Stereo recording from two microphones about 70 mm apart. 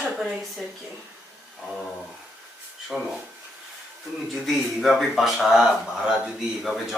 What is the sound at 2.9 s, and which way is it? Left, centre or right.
Speech, centre.